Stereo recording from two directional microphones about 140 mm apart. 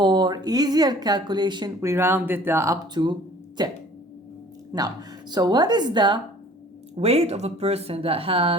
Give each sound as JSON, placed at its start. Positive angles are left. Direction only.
{"t": 0.0, "sound": "speech", "side_deg": -30}
{"t": 1.8, "sound": "a woman's voice", "side_deg": -20}
{"t": 6.9, "sound": "speech", "side_deg": -45}